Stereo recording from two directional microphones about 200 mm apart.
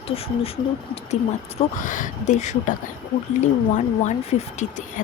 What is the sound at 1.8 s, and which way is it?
Speech, 40° left (ahead or behind).